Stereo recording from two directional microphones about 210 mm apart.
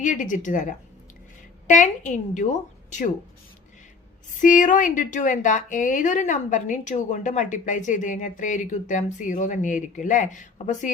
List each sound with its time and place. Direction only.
0.0 s a woman's voice: 35° left (ahead or behind)
4.4 s a woman's voice: 40° left (ahead or behind)